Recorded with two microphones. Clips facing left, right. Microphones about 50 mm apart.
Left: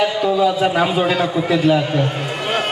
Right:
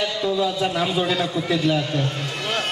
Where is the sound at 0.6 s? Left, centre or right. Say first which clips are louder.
Left 6 dB; left.